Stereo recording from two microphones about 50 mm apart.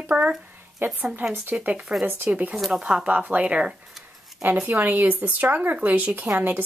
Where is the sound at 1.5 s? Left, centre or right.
Right.